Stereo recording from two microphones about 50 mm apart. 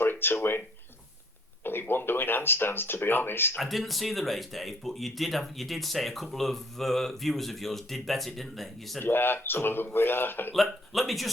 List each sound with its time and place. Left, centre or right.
0.0 s speech: left
1.6 s speech: left
3.6 s speech: centre
9.0 s a man's voice: left
10.5 s speech: centre